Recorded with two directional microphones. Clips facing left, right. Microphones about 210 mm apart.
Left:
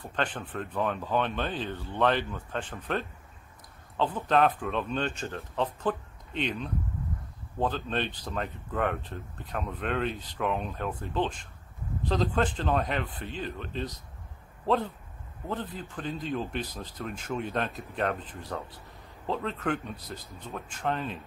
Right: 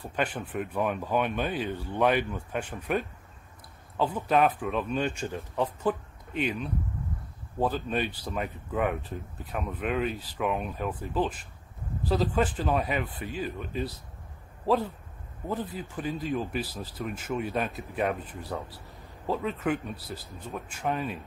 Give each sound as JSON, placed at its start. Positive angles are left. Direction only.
{"t": 0.0, "sound": "speech", "side_deg": -10}
{"t": 15.4, "sound": "speech", "side_deg": -10}